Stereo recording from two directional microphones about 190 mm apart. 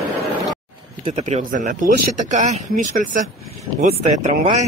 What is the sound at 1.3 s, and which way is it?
Speech, 40° right (ahead or behind).